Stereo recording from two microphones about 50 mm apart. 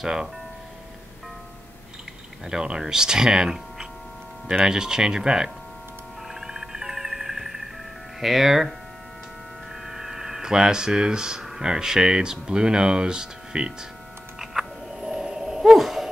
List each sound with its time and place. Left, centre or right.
0.0 s speech: centre
2.4 s speech: centre
6.2 s music: centre
8.2 s speech: centre
9.8 s hum: centre
11.4 s speech: centre
14.4 s a sound: centre